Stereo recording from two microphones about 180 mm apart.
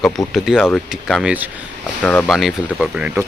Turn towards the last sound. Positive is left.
turn(degrees=-5)  # may be behind; listen again after turning